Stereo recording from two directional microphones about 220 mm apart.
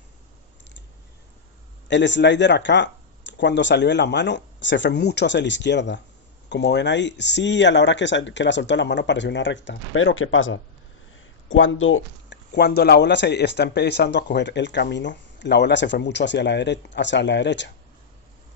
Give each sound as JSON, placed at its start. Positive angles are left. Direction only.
{"t": 1.9, "sound": "speech", "side_deg": 55}